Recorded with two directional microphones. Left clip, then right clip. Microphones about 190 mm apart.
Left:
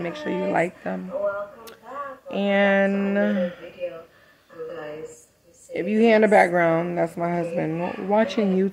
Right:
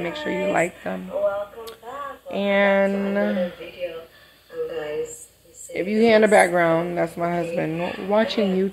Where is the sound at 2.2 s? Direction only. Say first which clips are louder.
Right 1 dB; 20° left (ahead or behind).